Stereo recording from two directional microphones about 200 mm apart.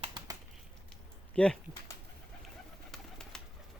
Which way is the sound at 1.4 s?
5° left (ahead or behind).